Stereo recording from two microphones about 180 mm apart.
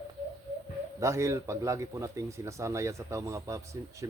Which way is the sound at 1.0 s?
15° right (ahead or behind).